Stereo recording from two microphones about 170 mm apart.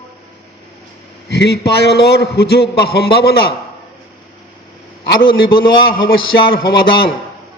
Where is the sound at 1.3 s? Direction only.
75° left (ahead or behind).